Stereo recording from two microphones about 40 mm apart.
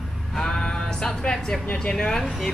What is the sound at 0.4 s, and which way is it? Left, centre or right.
Music, centre.